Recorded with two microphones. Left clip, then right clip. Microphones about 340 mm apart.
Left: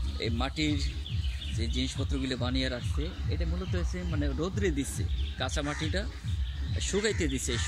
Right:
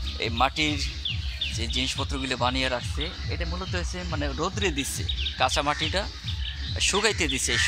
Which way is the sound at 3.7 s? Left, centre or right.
Right.